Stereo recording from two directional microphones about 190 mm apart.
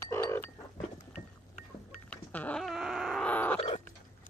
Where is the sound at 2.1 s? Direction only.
5° left (ahead or behind).